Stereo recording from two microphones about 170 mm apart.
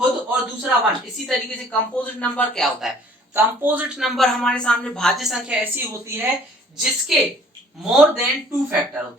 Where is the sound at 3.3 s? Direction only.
10° right (ahead or behind).